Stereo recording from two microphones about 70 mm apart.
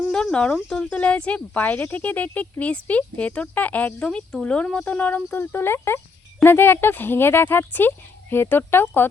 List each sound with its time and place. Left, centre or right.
0.0 s speech: centre
4.1 s speech: centre; by 9.0 s left